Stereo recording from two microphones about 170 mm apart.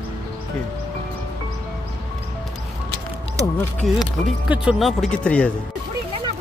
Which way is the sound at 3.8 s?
Centre (ahead or behind).